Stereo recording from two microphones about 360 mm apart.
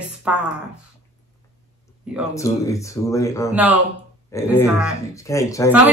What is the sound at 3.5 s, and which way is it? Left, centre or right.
Speech, centre.